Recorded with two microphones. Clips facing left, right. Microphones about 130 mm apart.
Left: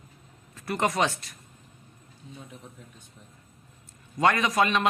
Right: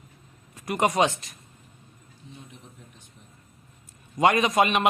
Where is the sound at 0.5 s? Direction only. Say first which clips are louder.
Right 3 dB; 15° right (ahead or behind).